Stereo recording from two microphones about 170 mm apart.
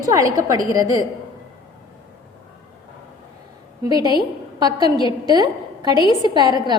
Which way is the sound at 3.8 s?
20° right (ahead or behind).